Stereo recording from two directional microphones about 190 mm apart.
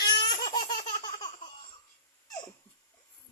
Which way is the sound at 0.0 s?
20° left (ahead or behind).